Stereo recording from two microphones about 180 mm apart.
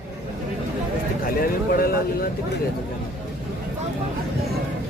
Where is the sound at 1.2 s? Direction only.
55° left (ahead or behind).